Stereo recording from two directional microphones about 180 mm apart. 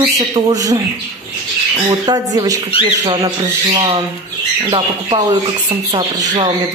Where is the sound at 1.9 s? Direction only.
20° right (ahead or behind).